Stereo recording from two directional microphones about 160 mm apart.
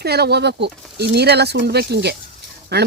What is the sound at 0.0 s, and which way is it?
Speech, 90° right.